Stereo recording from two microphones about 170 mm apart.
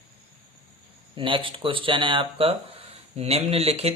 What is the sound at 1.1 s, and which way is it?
Speech, 30° right (ahead or behind).